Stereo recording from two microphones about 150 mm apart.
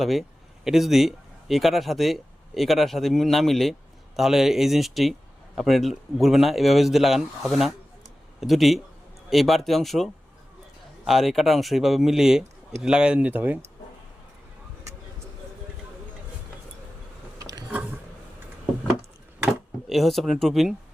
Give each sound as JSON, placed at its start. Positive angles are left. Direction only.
{"t": 0.0, "sound": "a man's voice", "side_deg": 0}
{"t": 17.3, "sound": "a sound", "side_deg": -25}
{"t": 19.5, "sound": "speech", "side_deg": 0}